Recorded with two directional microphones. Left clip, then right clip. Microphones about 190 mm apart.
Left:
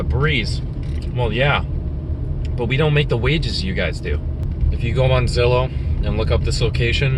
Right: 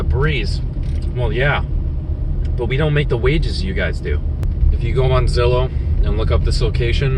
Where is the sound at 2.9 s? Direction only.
15° left (ahead or behind).